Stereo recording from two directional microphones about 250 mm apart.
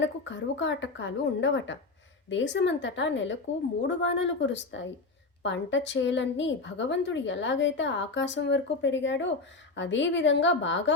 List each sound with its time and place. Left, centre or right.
0.0 s a woman's voice: left